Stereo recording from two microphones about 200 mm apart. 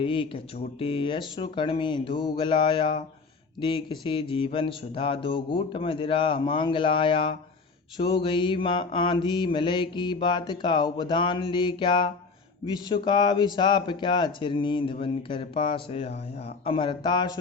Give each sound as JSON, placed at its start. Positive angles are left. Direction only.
{"t": 0.0, "sound": "mantra", "side_deg": 25}